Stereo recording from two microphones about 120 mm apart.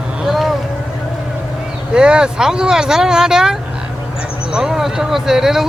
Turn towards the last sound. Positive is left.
turn(degrees=-5)  # may be behind; listen again after turning